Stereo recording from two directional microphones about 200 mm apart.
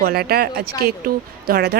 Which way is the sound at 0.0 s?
50° right (ahead or behind).